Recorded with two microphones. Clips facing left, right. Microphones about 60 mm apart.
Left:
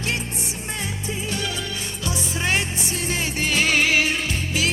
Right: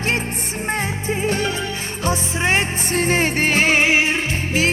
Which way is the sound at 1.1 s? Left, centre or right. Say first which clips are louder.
Right 8 dB; right.